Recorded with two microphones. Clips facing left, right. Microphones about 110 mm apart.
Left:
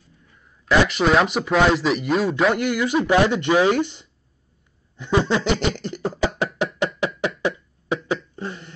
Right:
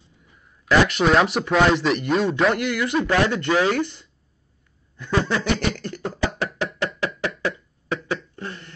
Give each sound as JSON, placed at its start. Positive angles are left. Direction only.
{"t": 0.7, "sound": "speech", "side_deg": 0}
{"t": 4.9, "sound": "beatboxing", "side_deg": 20}
{"t": 7.1, "sound": "cough", "side_deg": 20}